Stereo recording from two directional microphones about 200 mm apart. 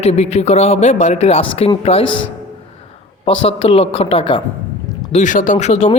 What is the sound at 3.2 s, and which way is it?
Speech, 30° left (ahead or behind).